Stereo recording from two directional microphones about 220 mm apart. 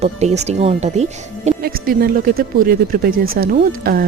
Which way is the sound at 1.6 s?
40° right (ahead or behind).